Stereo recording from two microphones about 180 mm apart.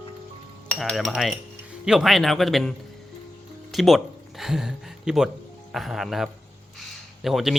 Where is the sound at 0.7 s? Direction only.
Centre (ahead or behind).